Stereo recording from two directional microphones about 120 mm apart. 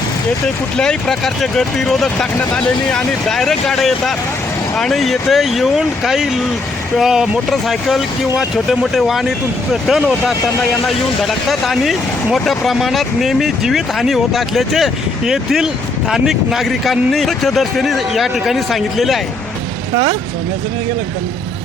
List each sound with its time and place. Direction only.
0.4 s speech: 5° left (ahead or behind)